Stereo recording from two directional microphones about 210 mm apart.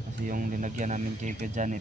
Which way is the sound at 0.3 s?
40° right (ahead or behind).